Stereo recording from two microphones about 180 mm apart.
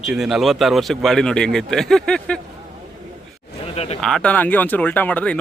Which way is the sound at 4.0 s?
5° left (ahead or behind).